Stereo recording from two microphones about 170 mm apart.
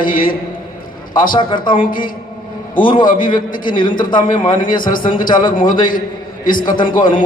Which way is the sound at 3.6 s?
30° left (ahead or behind).